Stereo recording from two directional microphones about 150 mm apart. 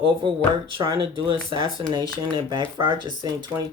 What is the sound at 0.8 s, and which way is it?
Speech, 35° right (ahead or behind).